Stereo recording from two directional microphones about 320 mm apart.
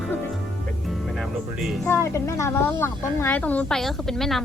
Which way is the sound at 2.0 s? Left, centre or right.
Centre.